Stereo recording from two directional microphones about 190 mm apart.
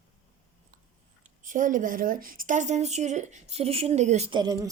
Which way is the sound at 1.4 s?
45° right (ahead or behind).